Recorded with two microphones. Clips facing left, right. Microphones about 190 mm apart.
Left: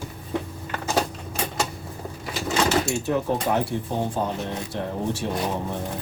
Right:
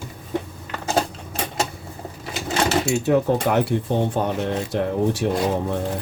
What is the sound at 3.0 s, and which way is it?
Speech, 70° right (ahead or behind).